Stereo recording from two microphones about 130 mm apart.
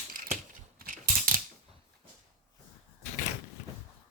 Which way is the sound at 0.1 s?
90° right.